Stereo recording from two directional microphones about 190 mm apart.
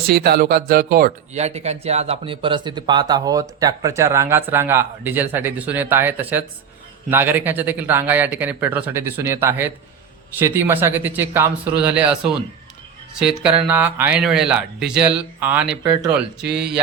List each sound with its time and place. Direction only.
0.1 s speech: 55° right (ahead or behind)
1.3 s speech: 35° right (ahead or behind); by 16.8 s 5° right (ahead or behind)